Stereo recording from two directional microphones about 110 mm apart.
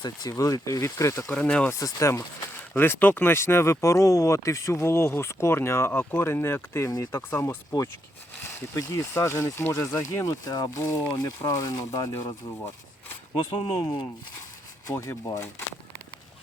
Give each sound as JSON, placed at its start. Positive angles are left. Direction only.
{"t": 0.0, "sound": "speech", "side_deg": 35}
{"t": 1.3, "sound": "speech", "side_deg": 10}
{"t": 1.8, "sound": "speech", "side_deg": 25}
{"t": 8.7, "sound": "speech", "side_deg": 30}
{"t": 13.3, "sound": "speech", "side_deg": 45}
{"t": 14.8, "sound": "speech", "side_deg": 25}